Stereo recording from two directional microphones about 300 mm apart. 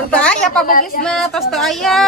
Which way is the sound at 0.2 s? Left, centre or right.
Centre.